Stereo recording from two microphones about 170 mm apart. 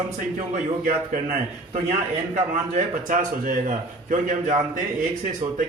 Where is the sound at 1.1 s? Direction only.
50° right (ahead or behind).